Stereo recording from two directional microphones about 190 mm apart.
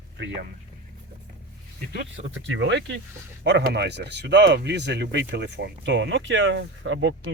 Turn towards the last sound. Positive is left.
turn(degrees=-85)